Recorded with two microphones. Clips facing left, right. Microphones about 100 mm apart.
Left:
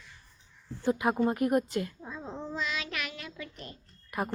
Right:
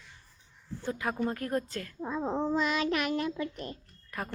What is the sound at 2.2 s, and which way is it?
Child singing, 65° right (ahead or behind).